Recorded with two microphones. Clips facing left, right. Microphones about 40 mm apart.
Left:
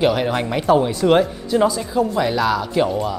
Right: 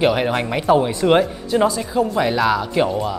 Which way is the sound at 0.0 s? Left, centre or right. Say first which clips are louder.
Even; centre.